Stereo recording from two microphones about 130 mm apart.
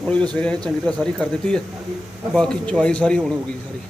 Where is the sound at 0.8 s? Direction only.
5° left (ahead or behind).